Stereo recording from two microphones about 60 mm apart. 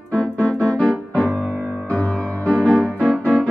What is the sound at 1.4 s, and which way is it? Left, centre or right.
Music, right.